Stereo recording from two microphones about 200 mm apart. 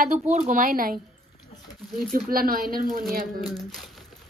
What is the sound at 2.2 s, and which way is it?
Speech, 45° right (ahead or behind).